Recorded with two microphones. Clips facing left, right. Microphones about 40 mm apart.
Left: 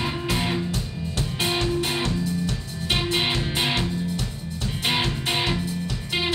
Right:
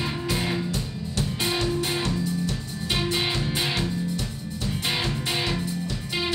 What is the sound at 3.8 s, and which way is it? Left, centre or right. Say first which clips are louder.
Music: left 1 dB; centre.